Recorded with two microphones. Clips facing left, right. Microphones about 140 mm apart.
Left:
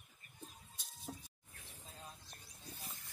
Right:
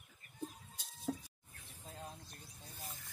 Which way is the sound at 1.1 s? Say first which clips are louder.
Right 9 dB; 90° right.